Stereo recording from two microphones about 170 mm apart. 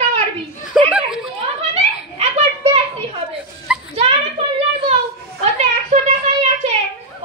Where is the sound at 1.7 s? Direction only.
40° right (ahead or behind).